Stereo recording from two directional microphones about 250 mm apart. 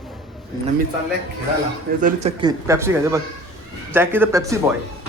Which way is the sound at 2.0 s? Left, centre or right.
Right.